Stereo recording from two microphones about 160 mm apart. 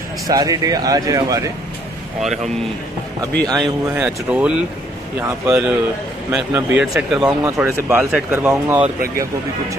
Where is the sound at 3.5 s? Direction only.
Centre (ahead or behind).